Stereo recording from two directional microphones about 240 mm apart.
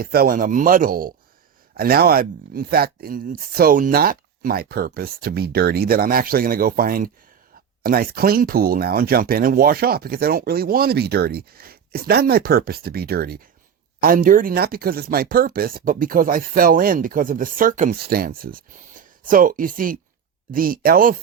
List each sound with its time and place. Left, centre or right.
0.0 s speech: right